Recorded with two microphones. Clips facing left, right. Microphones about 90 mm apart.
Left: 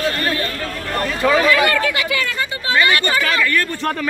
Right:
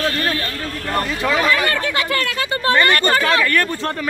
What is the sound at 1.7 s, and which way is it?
Speech, 40° right (ahead or behind).